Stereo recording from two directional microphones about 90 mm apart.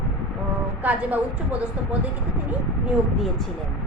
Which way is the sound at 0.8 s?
15° right (ahead or behind).